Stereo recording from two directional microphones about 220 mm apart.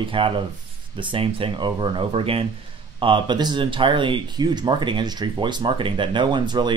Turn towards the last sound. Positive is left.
turn(degrees=-20)  # may be behind; listen again after turning